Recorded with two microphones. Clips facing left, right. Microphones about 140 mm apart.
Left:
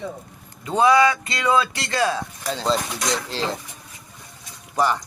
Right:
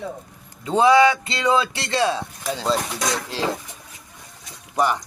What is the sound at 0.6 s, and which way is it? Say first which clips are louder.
A man's voice: right 2 dB; 25° right (ahead or behind).